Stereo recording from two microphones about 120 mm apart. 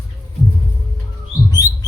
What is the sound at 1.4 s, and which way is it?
Bird, 30° left (ahead or behind).